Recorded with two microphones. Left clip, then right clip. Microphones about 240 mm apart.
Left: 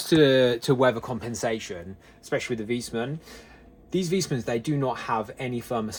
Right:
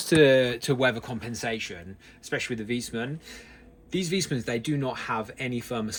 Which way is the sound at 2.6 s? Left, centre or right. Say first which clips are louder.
Left 2 dB; centre.